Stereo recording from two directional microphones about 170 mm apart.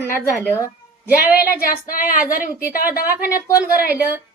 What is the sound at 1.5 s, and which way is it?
Speech, 60° left (ahead or behind).